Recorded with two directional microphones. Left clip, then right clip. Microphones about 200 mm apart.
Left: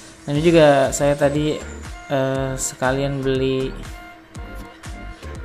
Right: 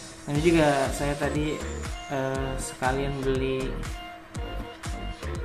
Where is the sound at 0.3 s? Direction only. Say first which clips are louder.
Left 9 dB; 40° left (ahead or behind).